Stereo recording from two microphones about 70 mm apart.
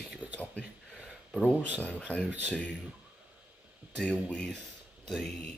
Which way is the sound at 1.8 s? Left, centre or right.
Centre.